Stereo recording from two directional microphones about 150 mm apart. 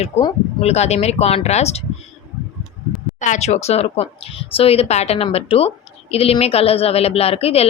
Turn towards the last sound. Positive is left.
turn(degrees=40)  # may be behind; listen again after turning